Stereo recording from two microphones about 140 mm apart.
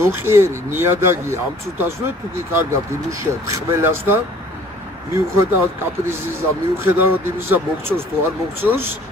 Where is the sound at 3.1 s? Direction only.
20° right (ahead or behind).